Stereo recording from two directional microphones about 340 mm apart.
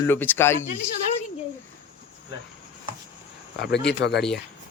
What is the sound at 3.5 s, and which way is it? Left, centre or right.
Speech, left.